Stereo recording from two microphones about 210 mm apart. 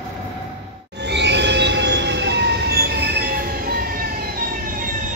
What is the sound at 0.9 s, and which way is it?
Train, 55° right (ahead or behind).